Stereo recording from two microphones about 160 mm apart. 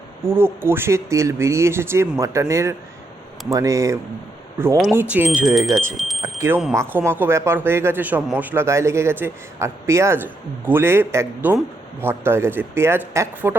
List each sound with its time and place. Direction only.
0.3 s a man's voice: 15° right (ahead or behind)
4.9 s a man's voice: 10° right (ahead or behind)
6.0 s smoke detector: centre (ahead or behind)
6.4 s a man's voice: 15° right (ahead or behind)